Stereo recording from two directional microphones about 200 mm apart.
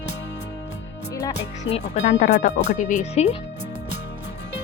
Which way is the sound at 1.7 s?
35° left (ahead or behind).